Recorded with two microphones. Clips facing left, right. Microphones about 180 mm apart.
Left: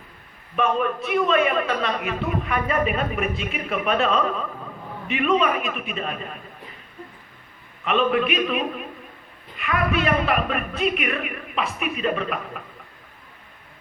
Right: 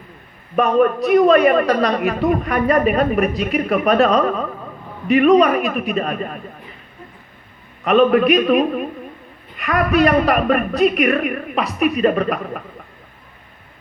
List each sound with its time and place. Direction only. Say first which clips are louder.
0.5 s a woman's voice: right 8 dB; 45° right (ahead or behind)
7.9 s a woman's voice: right 8 dB; 40° right (ahead or behind)